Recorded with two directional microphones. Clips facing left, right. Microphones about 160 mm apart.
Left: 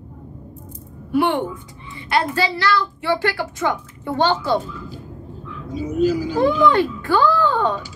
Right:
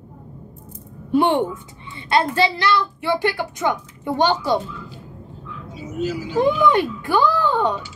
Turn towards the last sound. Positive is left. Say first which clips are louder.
# left 1 dB
turn(degrees=-15)  # may be behind; listen again after turning